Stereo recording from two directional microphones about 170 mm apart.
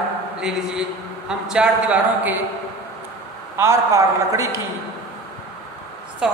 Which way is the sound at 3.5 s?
15° right (ahead or behind).